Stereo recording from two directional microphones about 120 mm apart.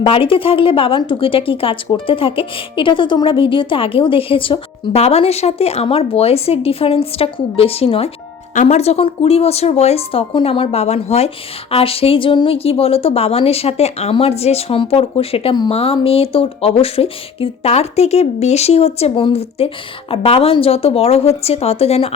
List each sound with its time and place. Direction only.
0.0 s speech: 50° left (ahead or behind)